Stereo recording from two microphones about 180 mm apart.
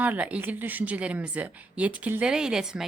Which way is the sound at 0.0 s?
10° right (ahead or behind).